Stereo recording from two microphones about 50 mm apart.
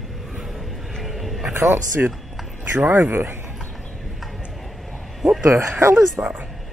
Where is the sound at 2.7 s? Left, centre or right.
Right.